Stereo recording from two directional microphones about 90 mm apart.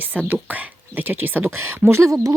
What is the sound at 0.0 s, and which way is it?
Speech, 20° right (ahead or behind).